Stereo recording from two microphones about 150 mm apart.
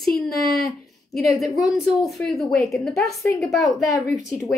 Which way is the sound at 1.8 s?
Centre (ahead or behind).